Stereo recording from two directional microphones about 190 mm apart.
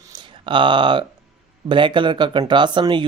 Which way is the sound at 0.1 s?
25° right (ahead or behind).